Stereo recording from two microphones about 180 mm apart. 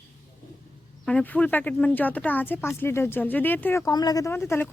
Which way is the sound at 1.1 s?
5° left (ahead or behind).